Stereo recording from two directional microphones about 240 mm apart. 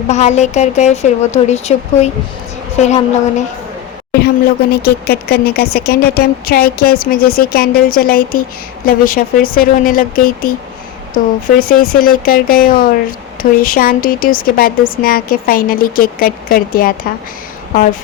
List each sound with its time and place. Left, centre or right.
0.1 s a woman's voice: left
4.7 s speech: left